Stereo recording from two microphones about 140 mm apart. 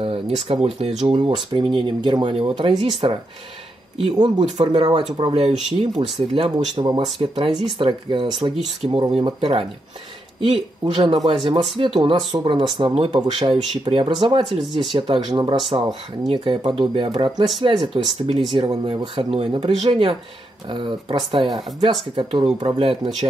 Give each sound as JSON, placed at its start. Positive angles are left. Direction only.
{"t": 0.0, "sound": "speech", "side_deg": -40}
{"t": 1.1, "sound": "speech", "side_deg": -35}